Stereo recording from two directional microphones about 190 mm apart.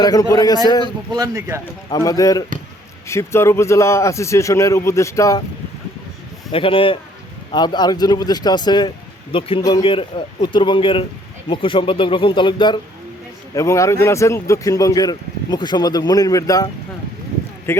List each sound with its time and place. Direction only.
0.0 s a man's voice: 20° left (ahead or behind)
1.1 s speech: 15° right (ahead or behind)
1.9 s speech: 20° left (ahead or behind)
6.5 s a man's voice: 30° left (ahead or behind)
17.7 s speech: 15° left (ahead or behind)